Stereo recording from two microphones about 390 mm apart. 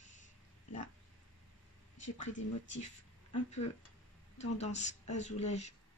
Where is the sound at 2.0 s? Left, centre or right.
Left.